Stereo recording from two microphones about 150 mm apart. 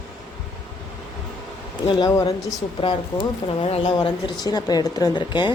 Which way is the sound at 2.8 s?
35° left (ahead or behind).